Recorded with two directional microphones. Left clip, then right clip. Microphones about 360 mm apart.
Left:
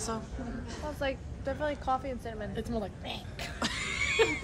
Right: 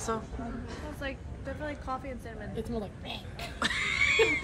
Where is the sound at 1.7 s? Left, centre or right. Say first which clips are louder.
Left 5 dB; left.